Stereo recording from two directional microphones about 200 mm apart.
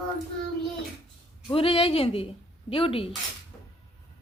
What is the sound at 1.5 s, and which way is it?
Speech, 25° left (ahead or behind).